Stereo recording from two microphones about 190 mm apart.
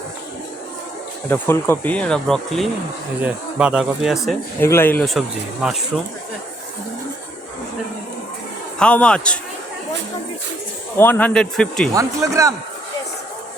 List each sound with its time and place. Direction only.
1.3 s speech: 10° left (ahead or behind)
4.6 s speech: 10° left (ahead or behind); by 5.8 s 5° right (ahead or behind)
8.8 s speech: 5° left (ahead or behind)
10.9 s speech: 10° left (ahead or behind)
11.9 s a man's voice: 15° right (ahead or behind)